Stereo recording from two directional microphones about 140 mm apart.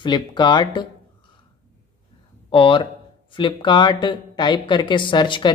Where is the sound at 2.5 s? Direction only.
35° left (ahead or behind).